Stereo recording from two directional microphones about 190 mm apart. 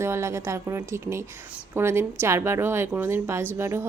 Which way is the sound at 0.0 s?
15° right (ahead or behind).